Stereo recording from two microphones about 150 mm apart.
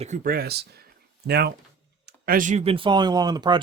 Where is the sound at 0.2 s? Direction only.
80° right.